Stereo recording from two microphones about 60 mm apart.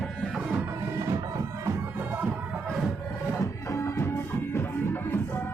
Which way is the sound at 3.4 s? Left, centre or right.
Left.